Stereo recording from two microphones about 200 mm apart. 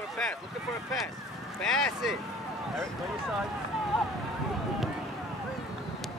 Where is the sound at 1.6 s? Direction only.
Centre (ahead or behind).